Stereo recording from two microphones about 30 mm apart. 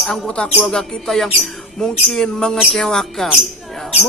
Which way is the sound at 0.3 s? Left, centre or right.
Left.